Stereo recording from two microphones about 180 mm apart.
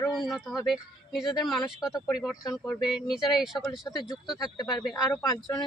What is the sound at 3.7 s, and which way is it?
Speech, 20° left (ahead or behind).